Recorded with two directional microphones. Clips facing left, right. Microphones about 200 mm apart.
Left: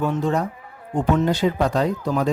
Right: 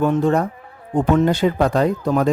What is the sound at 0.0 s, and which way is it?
Speech, 55° right (ahead or behind).